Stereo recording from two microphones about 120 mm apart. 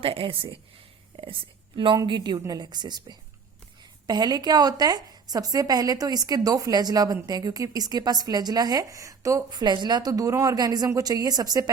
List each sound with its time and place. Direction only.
0.0 s a woman's voice: 50° right (ahead or behind); by 11.7 s 30° right (ahead or behind)